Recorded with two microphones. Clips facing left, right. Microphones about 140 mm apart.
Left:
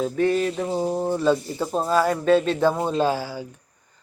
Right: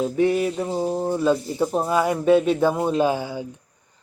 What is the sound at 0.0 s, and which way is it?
Speech, 15° right (ahead or behind).